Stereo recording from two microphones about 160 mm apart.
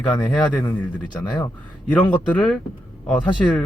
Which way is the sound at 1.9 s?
10° left (ahead or behind).